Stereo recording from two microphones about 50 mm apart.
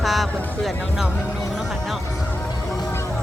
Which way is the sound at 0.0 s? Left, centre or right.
Centre.